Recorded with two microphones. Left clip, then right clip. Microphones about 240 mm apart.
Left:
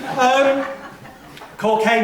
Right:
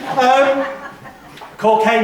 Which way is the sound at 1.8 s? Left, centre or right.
Centre.